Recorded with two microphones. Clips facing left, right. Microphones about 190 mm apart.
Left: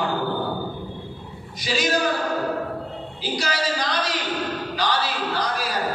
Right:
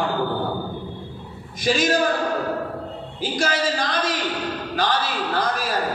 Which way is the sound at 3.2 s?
50° right (ahead or behind).